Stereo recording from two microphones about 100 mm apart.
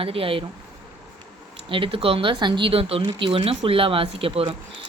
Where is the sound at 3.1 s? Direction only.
55° right (ahead or behind).